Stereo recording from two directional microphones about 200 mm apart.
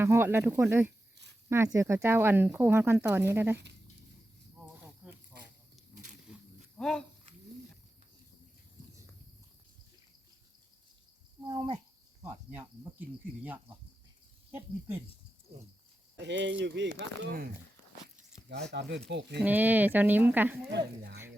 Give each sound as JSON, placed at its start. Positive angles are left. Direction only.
{"t": 0.0, "sound": "speech", "side_deg": -10}
{"t": 5.0, "sound": "snake", "side_deg": -5}
{"t": 5.9, "sound": "insect", "side_deg": -40}
{"t": 6.7, "sound": "speech", "side_deg": 5}
{"t": 11.5, "sound": "cricket", "side_deg": -25}
{"t": 12.2, "sound": "speech", "side_deg": -10}
{"t": 16.1, "sound": "speech", "side_deg": -60}
{"t": 19.4, "sound": "speech", "side_deg": -10}
{"t": 20.7, "sound": "speech", "side_deg": -55}